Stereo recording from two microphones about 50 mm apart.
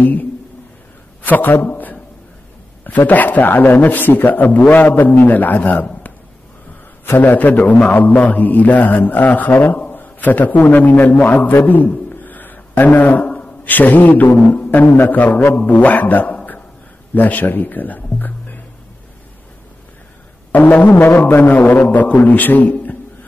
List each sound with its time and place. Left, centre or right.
0.0 s a man's voice: left
7.2 s a man's voice: left
20.5 s a man's voice: left
20.9 s a man's voice: left
21.3 s a man's voice: left
21.8 s a man's voice: left